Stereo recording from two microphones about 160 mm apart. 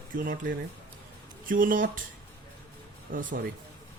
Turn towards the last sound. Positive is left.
turn(degrees=-55)  # may be behind; listen again after turning